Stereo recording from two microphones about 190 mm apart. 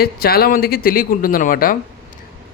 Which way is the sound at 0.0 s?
55° left (ahead or behind).